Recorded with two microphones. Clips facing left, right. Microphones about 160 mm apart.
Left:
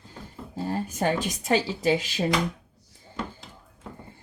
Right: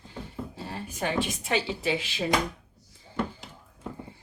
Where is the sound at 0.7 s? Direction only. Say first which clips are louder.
Left 7 dB; 40° left (ahead or behind).